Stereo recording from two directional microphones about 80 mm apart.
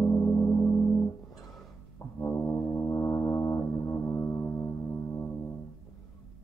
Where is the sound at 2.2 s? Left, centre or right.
Left.